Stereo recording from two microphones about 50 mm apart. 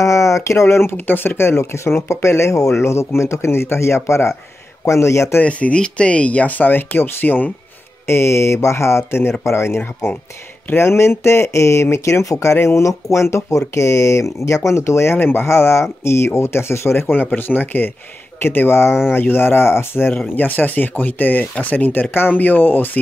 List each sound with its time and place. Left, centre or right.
0.0 s speech: left
0.9 s speech: left
1.6 s speech: left
5.4 s speech: left
8.1 s speech: left
12.5 s speech: left
15.1 s speech: left
20.3 s speech: left